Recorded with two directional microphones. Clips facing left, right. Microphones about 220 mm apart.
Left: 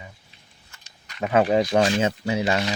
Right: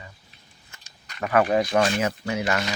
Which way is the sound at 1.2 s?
20° left (ahead or behind).